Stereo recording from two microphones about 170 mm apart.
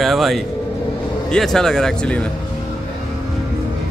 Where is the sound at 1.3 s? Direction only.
Centre (ahead or behind).